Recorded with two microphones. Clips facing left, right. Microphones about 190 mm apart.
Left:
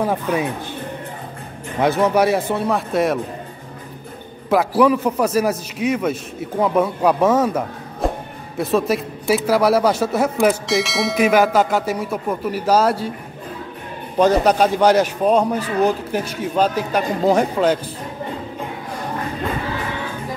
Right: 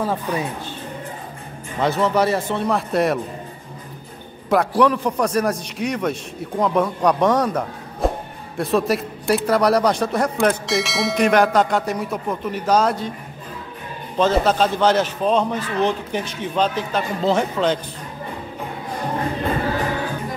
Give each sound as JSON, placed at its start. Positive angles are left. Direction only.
{"t": 0.0, "sound": "a man's voice", "side_deg": 15}
{"t": 1.8, "sound": "a man's voice", "side_deg": 15}
{"t": 4.5, "sound": "a man's voice", "side_deg": 5}
{"t": 14.1, "sound": "a man's voice", "side_deg": 15}
{"t": 19.8, "sound": "music", "side_deg": -40}